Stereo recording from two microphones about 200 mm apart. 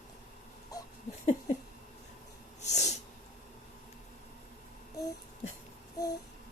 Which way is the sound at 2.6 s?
35° left (ahead or behind).